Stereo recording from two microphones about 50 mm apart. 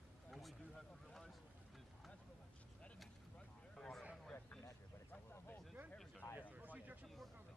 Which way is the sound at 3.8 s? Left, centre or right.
Centre.